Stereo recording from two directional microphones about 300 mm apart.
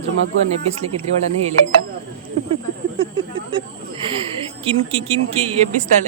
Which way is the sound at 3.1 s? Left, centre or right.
Centre.